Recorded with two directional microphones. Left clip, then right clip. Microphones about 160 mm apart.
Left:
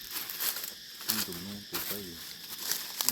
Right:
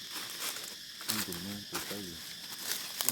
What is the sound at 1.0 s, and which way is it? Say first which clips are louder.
Insect: left 2 dB; 35° left (ahead or behind).